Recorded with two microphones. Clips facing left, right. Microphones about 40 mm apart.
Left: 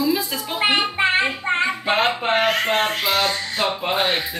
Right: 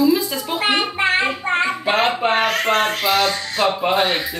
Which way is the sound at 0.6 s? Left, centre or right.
Centre.